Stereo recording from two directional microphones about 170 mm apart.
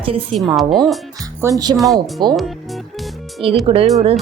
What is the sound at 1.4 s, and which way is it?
Speech, 20° right (ahead or behind).